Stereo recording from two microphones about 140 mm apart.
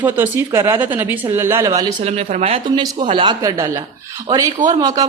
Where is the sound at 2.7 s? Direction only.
35° right (ahead or behind).